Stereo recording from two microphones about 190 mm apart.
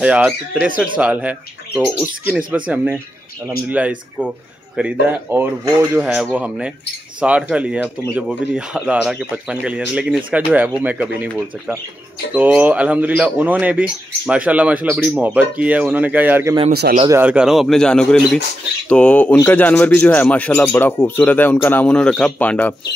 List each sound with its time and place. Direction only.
0.0 s speech: 5° right (ahead or behind)
16.7 s a man's voice: 55° right (ahead or behind)
17.1 s speech: 5° right (ahead or behind)